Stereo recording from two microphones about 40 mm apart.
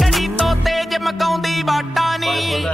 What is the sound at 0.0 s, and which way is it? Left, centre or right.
Music, centre.